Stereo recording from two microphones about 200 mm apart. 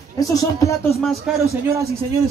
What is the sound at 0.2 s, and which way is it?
Speech, 15° left (ahead or behind).